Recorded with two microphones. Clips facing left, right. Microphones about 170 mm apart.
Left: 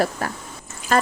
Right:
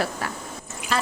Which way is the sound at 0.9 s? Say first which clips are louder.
Left 6 dB; 50° left (ahead or behind).